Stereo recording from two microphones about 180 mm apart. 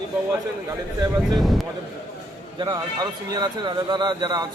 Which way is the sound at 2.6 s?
25° right (ahead or behind).